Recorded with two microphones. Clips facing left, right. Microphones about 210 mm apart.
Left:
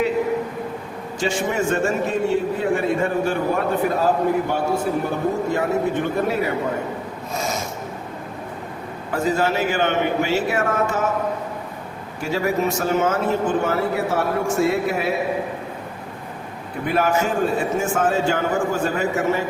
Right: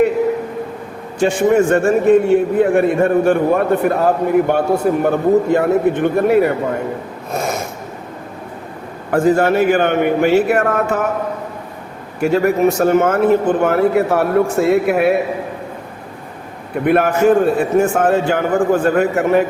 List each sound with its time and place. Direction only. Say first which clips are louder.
1.2 s a man's voice: right 9 dB; 55° right (ahead or behind)
7.3 s filing: right 5 dB; 55° right (ahead or behind)
9.1 s a man's voice: right 8 dB; 55° right (ahead or behind)
12.2 s a man's voice: right 8 dB; 60° right (ahead or behind)
16.8 s a man's voice: right 8 dB; 60° right (ahead or behind)